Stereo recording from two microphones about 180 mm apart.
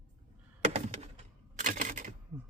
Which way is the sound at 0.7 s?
35° right (ahead or behind).